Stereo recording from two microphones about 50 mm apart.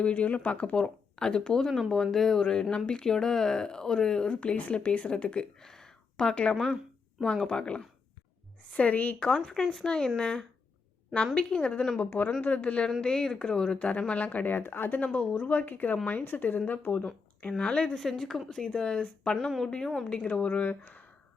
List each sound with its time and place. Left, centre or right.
0.0 s speech: left
5.5 s a sound: centre
6.5 s speech: centre
8.7 s speech: left
9.5 s speech: centre
13.7 s speech: left
17.6 s speech: centre
19.5 s a woman's voice: centre
20.1 s speech: left